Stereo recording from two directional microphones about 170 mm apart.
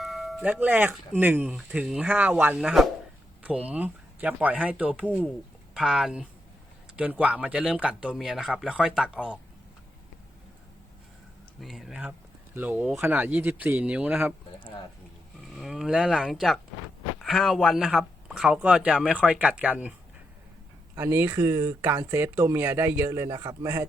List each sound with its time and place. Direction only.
0.0 s speech: centre (ahead or behind)
11.6 s speech: centre (ahead or behind)
15.4 s speech: centre (ahead or behind)
20.9 s speech: 15° right (ahead or behind)